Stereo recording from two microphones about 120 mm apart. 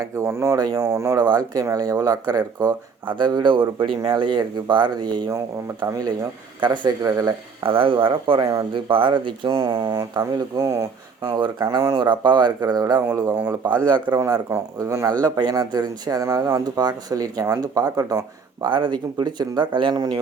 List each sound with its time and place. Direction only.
0.0 s speech: 25° right (ahead or behind)
7.6 s speech: 50° right (ahead or behind); by 10.8 s 30° right (ahead or behind)
11.2 s speech: 40° right (ahead or behind)
14.2 s speech: 30° right (ahead or behind)
18.7 s speech: 40° right (ahead or behind)